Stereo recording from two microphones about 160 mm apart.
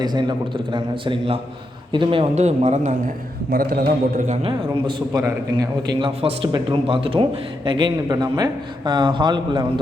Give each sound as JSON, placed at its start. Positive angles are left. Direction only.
{"t": 0.0, "sound": "speech", "side_deg": -25}
{"t": 3.5, "sound": "a man's voice", "side_deg": -65}
{"t": 4.4, "sound": "speech", "side_deg": -30}